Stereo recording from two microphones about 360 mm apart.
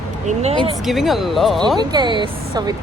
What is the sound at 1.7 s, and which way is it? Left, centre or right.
Speech, centre.